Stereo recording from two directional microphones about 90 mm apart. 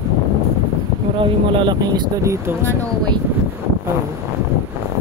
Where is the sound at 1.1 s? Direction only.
65° right (ahead or behind).